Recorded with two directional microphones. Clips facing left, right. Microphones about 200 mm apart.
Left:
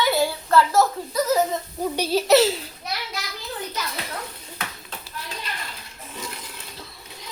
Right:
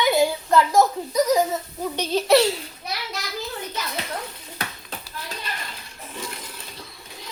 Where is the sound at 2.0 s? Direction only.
5° left (ahead or behind).